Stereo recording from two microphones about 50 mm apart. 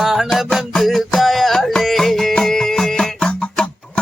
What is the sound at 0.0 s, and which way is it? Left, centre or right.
Music, centre.